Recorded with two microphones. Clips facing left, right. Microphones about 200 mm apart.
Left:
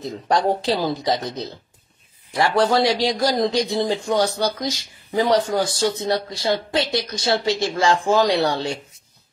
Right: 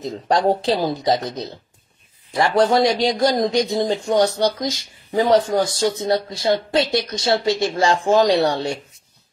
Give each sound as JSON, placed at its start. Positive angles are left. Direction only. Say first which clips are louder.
{"t": 0.0, "sound": "speech", "louder": "right 2 dB", "side_deg": -20}